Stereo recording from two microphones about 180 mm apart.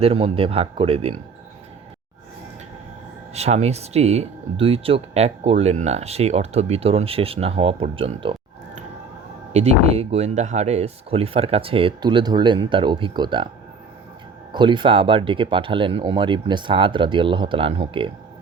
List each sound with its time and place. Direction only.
0.0 s speech: 30° right (ahead or behind)
3.3 s speech: 35° right (ahead or behind)
9.5 s speech: 40° right (ahead or behind)
14.5 s speech: 25° right (ahead or behind)